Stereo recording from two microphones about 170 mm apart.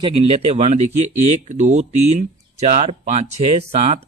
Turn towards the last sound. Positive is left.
turn(degrees=-35)  # may be behind; listen again after turning